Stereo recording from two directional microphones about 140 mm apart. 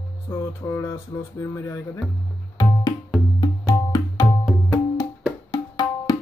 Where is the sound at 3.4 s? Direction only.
25° left (ahead or behind).